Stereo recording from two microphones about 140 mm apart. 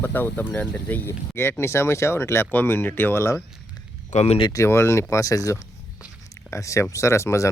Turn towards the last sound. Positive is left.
turn(degrees=20)  # may be behind; listen again after turning